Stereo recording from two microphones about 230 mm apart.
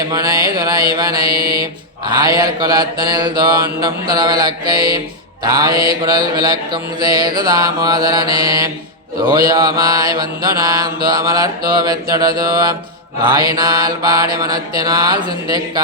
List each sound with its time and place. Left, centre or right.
0.1 s mantra: centre
1.3 s mantra: right
2.0 s mantra: centre
5.7 s mantra: right
6.3 s mantra: centre